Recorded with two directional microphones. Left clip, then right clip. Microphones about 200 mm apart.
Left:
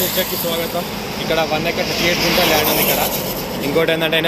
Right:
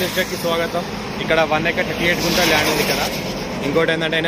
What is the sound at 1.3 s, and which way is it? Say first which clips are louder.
Speech: right 2 dB; centre (ahead or behind).